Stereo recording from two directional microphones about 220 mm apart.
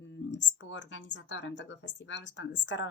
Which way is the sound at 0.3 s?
55° left (ahead or behind).